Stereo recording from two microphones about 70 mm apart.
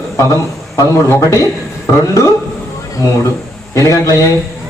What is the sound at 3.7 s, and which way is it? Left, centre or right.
Speech, left.